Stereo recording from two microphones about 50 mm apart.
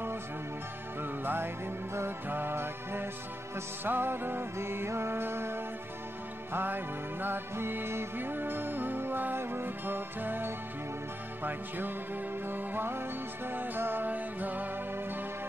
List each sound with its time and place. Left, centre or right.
1.0 s music: right
6.5 s music: right
12.4 s music: right